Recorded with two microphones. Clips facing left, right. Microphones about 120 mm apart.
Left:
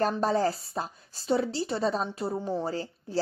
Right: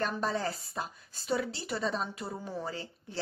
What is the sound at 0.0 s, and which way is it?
A woman's voice, 35° left (ahead or behind).